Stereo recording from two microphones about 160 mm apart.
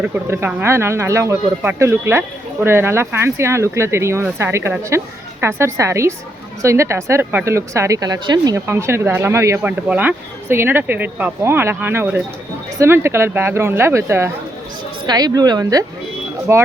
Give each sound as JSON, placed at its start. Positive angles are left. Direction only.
{"t": 0.0, "sound": "a woman's voice", "side_deg": -15}